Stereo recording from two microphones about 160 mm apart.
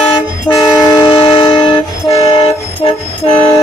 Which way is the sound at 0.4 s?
20° left (ahead or behind).